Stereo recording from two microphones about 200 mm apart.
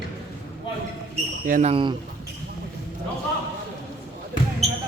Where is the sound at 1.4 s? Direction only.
45° right (ahead or behind).